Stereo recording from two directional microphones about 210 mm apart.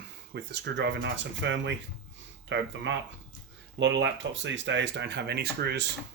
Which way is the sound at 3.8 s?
60° right (ahead or behind).